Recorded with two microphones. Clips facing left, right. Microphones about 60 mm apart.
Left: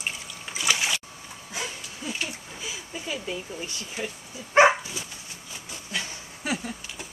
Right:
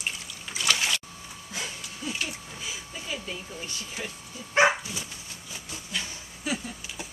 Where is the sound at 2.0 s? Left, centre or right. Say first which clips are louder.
Even; centre.